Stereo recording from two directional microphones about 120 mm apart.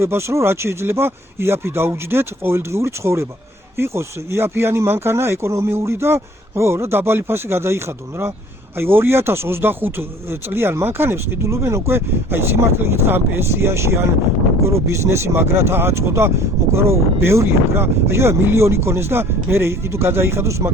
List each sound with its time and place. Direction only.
0.0 s speech: 20° right (ahead or behind)